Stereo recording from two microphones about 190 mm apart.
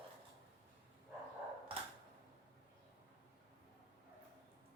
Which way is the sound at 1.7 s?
30° right (ahead or behind).